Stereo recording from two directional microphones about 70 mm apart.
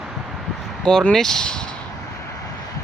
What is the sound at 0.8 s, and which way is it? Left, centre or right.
Speech, centre.